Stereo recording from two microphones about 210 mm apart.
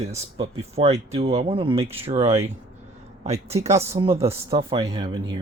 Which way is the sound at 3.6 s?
30° right (ahead or behind).